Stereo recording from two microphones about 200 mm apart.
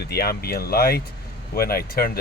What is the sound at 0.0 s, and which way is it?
Speech, 50° left (ahead or behind).